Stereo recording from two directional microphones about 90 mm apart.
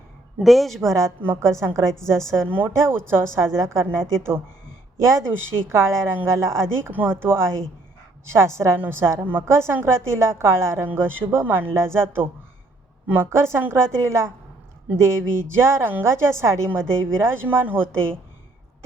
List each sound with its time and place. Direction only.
0.4 s a woman's voice: centre (ahead or behind)
0.9 s a woman's voice: 35° right (ahead or behind)
13.1 s a woman's voice: 25° right (ahead or behind)